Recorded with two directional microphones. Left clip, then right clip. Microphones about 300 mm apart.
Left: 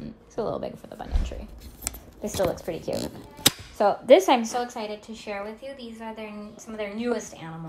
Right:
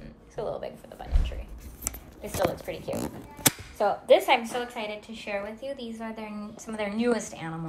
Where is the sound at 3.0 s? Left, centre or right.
Centre.